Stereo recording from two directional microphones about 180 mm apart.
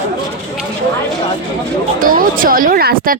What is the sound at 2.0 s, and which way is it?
Speech, 50° right (ahead or behind).